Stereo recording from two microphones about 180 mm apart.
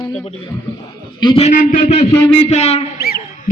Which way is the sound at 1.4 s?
45° left (ahead or behind).